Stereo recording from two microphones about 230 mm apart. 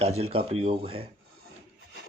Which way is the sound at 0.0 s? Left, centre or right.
Right.